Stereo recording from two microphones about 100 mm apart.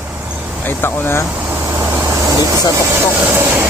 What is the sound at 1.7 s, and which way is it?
Vehicle, 20° right (ahead or behind).